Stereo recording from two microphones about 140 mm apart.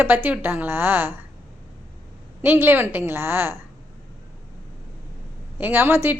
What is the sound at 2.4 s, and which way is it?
A woman's voice, 15° right (ahead or behind).